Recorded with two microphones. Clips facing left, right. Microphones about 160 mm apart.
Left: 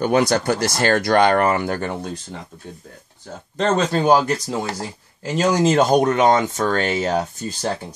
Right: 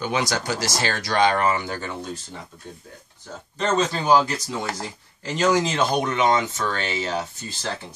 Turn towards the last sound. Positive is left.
turn(degrees=50)  # may be behind; listen again after turning